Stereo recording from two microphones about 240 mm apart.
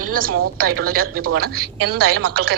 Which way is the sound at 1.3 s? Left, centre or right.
Right.